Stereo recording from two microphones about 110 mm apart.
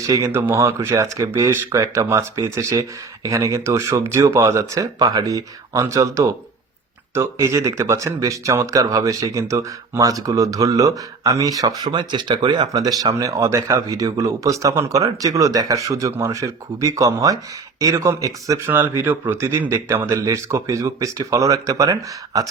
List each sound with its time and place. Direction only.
0.1 s speech: 25° right (ahead or behind)
11.9 s speech: 45° right (ahead or behind)
18.7 s speech: 20° right (ahead or behind)